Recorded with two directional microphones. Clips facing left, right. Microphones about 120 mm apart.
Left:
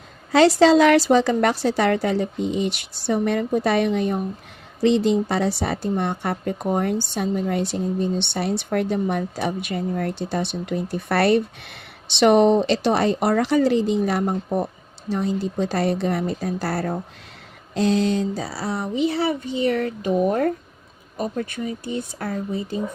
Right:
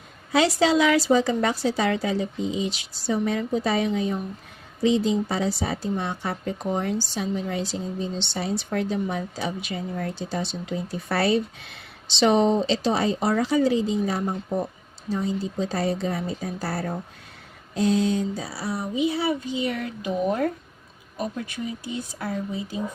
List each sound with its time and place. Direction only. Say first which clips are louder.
0.3 s a woman's voice: left 6 dB; 70° left (ahead or behind)
21.3 s speech: left 4 dB; 55° left (ahead or behind)